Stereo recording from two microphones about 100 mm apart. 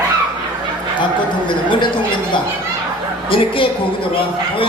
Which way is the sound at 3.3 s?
60° left (ahead or behind).